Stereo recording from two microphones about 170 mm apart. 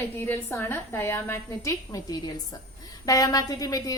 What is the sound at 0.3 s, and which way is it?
A woman's voice, 15° left (ahead or behind).